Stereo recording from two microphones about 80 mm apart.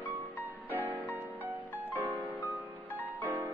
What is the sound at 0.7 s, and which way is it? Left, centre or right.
Music, right.